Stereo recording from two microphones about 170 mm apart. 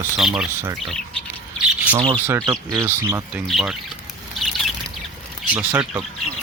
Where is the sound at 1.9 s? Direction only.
35° right (ahead or behind).